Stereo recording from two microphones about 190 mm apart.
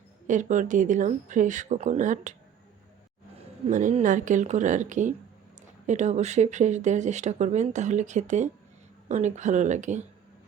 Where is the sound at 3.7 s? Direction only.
40° right (ahead or behind).